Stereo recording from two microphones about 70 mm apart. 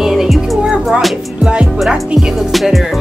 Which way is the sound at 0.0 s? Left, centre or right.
Centre.